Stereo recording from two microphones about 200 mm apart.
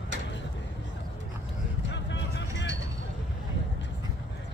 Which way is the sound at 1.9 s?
65° left (ahead or behind).